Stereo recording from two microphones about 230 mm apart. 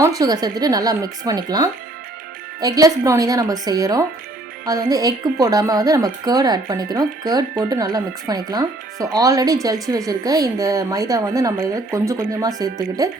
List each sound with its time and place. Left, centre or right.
0.0 s speech: centre